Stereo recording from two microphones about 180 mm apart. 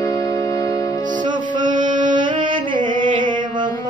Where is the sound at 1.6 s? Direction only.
45° right (ahead or behind).